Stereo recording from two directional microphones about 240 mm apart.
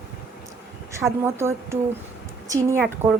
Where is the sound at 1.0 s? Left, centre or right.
Centre.